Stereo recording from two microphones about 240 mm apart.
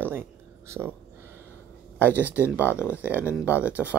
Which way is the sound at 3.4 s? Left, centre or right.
Centre.